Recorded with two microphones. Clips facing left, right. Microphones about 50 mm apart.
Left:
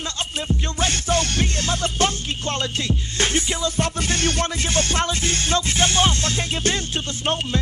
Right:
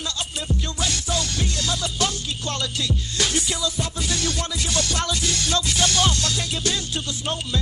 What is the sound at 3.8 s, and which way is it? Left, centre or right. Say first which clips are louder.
Music: left 4 dB; left.